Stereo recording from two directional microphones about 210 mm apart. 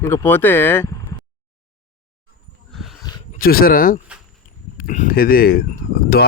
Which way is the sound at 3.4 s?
45° left (ahead or behind).